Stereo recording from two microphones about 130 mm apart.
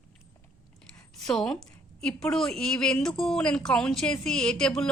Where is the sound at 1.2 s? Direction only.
5° left (ahead or behind).